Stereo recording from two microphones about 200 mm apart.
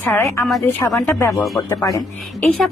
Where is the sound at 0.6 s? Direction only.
15° left (ahead or behind).